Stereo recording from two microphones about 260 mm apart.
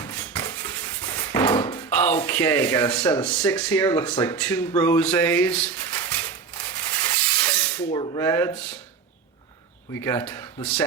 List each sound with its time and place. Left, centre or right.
0.3 s dishes: centre
1.5 s a sound: centre
1.9 s speech: centre
6.7 s rub: centre
7.9 s speech: centre
10.0 s speech: centre